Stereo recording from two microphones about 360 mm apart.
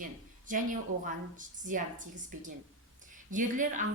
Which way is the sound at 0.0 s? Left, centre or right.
Right.